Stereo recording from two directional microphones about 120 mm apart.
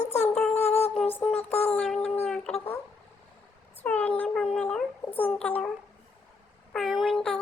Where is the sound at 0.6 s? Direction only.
60° left (ahead or behind).